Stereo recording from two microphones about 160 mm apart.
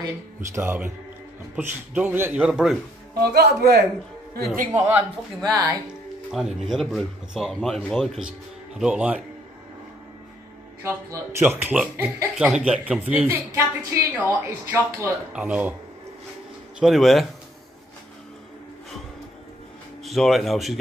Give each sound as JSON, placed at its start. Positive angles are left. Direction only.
{"t": 0.0, "sound": "a woman's voice", "side_deg": -15}
{"t": 3.2, "sound": "speech", "side_deg": -90}
{"t": 4.7, "sound": "a woman's voice", "side_deg": -10}
{"t": 5.4, "sound": "speech", "side_deg": -20}
{"t": 6.3, "sound": "speech", "side_deg": 0}
{"t": 10.8, "sound": "a woman's voice", "side_deg": -15}
{"t": 16.8, "sound": "speech", "side_deg": 0}
{"t": 20.0, "sound": "speech", "side_deg": 0}